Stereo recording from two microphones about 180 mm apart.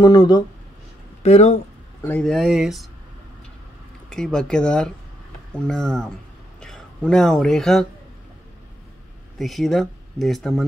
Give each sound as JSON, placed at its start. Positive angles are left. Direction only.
{"t": 0.0, "sound": "speech", "side_deg": 20}
{"t": 1.2, "sound": "speech", "side_deg": 35}
{"t": 2.0, "sound": "speech", "side_deg": 5}
{"t": 4.1, "sound": "speech", "side_deg": 5}
{"t": 9.4, "sound": "speech", "side_deg": 0}